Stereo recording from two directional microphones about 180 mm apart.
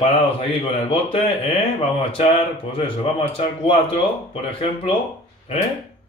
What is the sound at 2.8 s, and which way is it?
Speech, 30° left (ahead or behind).